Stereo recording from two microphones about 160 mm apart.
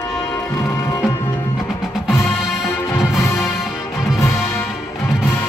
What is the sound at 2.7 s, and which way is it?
Music, 15° left (ahead or behind).